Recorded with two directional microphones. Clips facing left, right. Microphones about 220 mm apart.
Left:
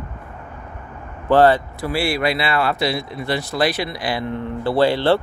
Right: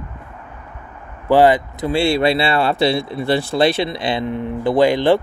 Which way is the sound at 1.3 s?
15° right (ahead or behind).